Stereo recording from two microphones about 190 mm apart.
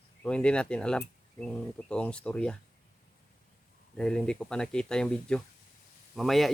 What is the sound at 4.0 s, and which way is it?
Speech, 5° left (ahead or behind).